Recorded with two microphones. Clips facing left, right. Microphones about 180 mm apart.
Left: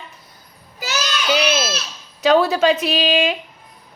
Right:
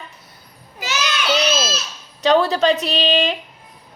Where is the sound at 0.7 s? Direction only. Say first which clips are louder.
Left 1 dB; 40° left (ahead or behind).